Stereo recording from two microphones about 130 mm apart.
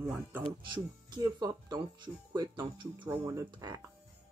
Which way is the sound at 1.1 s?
30° right (ahead or behind).